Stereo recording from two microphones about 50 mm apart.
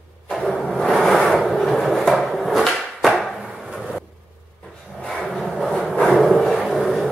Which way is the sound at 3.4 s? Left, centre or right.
Centre.